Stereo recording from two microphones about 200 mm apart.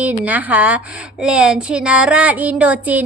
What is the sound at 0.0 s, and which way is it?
A woman's voice, 10° right (ahead or behind).